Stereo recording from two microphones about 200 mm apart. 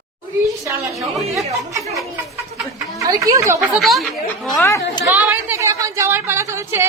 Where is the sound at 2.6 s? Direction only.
Centre (ahead or behind).